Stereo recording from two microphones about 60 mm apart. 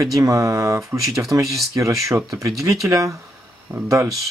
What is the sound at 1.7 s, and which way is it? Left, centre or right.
Speech, right.